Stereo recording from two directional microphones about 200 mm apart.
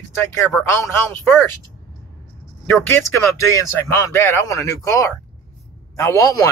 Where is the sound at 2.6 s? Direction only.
10° left (ahead or behind).